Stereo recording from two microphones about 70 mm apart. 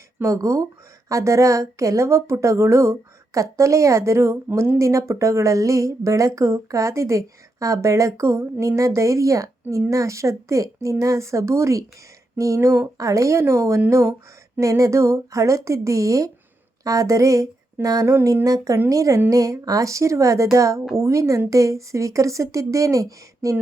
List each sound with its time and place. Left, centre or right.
0.2 s speech: right
4.4 s speech: right
4.8 s speech: right
12.5 s speech: right
13.0 s speech: right
14.6 s speech: right
18.0 s speech: right
18.4 s speech: right